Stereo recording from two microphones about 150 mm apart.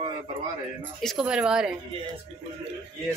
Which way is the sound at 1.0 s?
Centre (ahead or behind).